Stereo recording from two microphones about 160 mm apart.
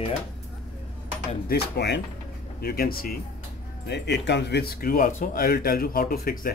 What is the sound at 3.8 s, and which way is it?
Speech, 90° left.